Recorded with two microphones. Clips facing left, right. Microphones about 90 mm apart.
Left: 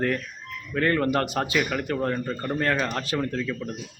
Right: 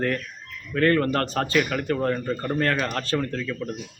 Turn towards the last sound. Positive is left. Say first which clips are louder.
# even
turn(degrees=5)  # may be behind; listen again after turning